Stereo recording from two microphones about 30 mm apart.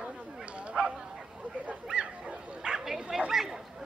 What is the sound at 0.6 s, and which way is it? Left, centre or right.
Bow-wow, right.